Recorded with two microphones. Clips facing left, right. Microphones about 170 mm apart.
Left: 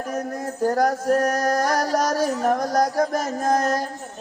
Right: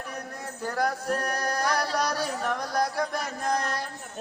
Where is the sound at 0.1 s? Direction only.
45° left (ahead or behind).